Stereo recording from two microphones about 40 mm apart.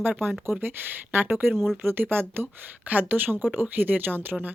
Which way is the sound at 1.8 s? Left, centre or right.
Right.